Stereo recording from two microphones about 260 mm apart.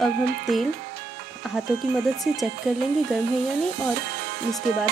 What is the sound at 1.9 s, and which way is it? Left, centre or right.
Speech, centre.